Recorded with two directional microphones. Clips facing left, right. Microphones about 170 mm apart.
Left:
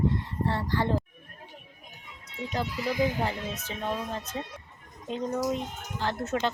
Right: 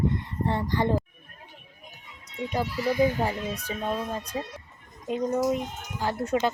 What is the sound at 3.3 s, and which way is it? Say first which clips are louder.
Speech: right 3 dB; 10° right (ahead or behind).